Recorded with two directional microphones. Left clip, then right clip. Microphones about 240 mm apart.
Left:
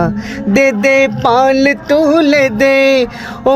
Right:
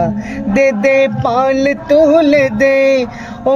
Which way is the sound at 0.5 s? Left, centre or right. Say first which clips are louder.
Left 1 dB; left.